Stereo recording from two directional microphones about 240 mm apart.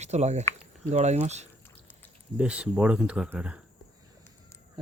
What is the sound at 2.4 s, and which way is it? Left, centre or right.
Speech, centre.